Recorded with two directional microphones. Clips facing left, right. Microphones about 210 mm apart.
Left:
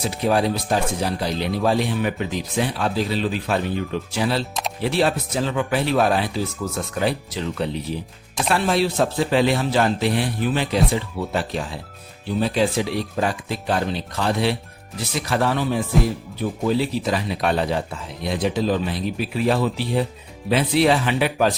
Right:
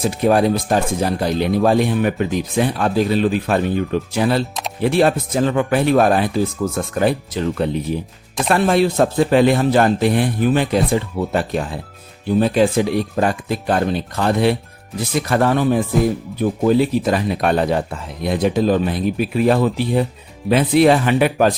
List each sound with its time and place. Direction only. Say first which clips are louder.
0.0 s speech: right 5 dB; 50° right (ahead or behind)